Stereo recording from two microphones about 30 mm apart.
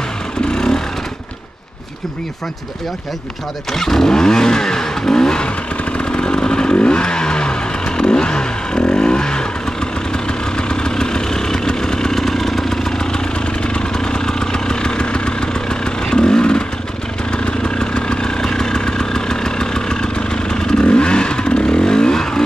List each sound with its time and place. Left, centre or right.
3.7 s vehicle: centre
5.9 s motorcycle: left
6.9 s vehicle: left
10.7 s vehicle: left
13.7 s vehicle: left